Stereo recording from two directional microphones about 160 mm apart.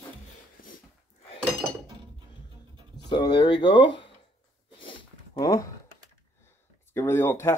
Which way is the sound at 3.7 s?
90° left.